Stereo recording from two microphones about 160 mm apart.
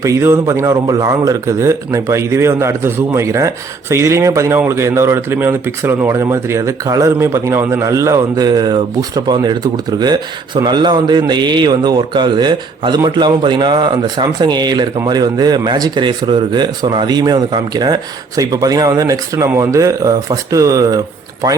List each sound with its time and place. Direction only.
0.0 s a man's voice: 15° right (ahead or behind)